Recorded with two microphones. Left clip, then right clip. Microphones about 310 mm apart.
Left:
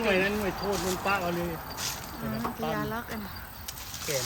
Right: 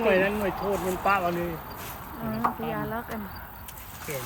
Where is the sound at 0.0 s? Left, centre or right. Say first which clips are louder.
Right 4 dB; centre.